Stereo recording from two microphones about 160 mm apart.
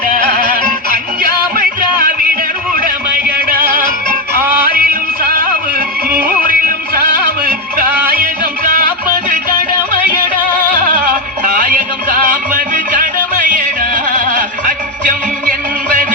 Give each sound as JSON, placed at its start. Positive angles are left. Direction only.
{"t": 1.2, "sound": "music", "side_deg": -60}
{"t": 2.7, "sound": "a sound", "side_deg": -60}
{"t": 4.7, "sound": "music", "side_deg": -65}
{"t": 6.5, "sound": "music", "side_deg": -60}
{"t": 11.5, "sound": "music", "side_deg": -55}
{"t": 14.7, "sound": "music", "side_deg": -55}